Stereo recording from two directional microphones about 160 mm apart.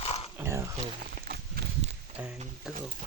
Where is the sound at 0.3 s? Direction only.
15° right (ahead or behind).